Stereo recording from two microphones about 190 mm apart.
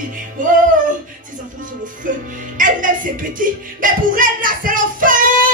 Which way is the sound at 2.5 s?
45° right (ahead or behind).